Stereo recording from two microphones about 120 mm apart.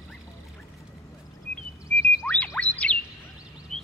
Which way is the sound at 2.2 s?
10° left (ahead or behind).